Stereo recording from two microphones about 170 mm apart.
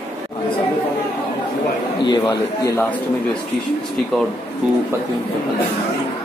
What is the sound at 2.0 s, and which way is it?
Speech, 25° left (ahead or behind).